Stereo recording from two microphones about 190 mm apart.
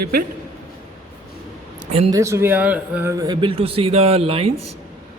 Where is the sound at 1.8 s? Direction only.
30° right (ahead or behind).